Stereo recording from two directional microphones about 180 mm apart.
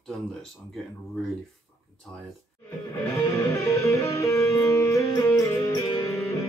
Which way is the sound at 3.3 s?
15° left (ahead or behind).